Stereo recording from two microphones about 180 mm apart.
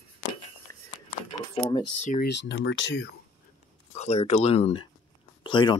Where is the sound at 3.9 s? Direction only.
35° left (ahead or behind).